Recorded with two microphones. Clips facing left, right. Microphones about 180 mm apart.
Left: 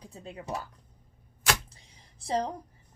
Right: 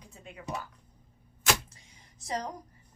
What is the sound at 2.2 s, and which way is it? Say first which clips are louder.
Speech: left 5 dB; 30° left (ahead or behind).